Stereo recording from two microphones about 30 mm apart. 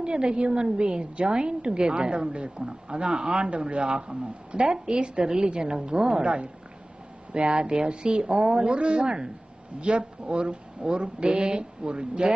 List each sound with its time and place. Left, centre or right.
0.0 s a woman's voice: right
9.0 s speech: right
9.8 s a woman's voice: right